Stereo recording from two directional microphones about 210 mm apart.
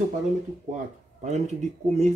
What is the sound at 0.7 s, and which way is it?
Speech, 35° right (ahead or behind).